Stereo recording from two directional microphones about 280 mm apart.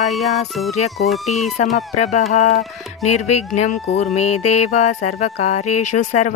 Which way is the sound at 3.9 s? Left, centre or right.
Left.